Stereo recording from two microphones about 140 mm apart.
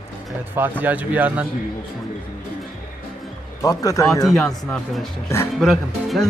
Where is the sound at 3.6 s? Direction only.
25° left (ahead or behind).